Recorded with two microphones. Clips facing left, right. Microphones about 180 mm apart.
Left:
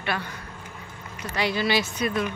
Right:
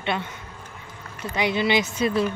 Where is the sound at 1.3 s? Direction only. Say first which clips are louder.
Right 2 dB; 20° right (ahead or behind).